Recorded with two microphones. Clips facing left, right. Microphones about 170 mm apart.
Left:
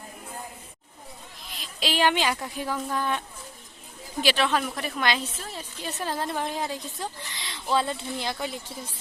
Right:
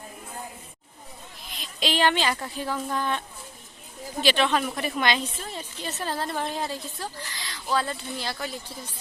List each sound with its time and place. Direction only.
1.5 s a woman's voice: 5° left (ahead or behind); by 8.5 s 20° left (ahead or behind)